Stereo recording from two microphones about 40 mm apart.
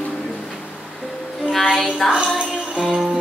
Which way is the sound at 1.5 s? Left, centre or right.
Centre.